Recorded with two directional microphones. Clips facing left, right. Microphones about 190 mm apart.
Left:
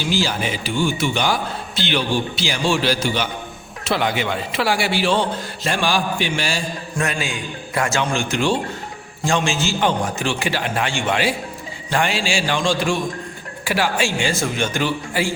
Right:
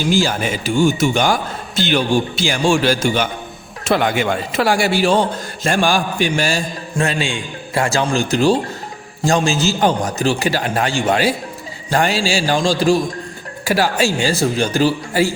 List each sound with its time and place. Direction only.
0.0 s a man's voice: 45° right (ahead or behind)
6.9 s a man's voice: 30° right (ahead or behind)